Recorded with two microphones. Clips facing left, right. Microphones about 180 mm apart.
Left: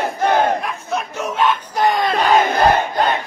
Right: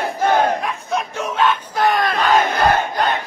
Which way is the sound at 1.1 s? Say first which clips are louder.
Left 1 dB; 10° left (ahead or behind).